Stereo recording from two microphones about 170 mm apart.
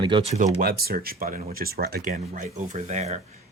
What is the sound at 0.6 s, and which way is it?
Speech, 60° right (ahead or behind).